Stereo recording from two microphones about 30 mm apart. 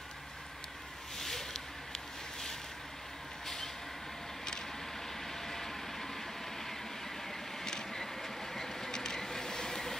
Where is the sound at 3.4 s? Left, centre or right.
Centre.